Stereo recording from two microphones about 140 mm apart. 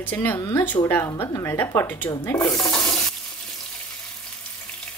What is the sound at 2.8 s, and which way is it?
Stir, 25° left (ahead or behind).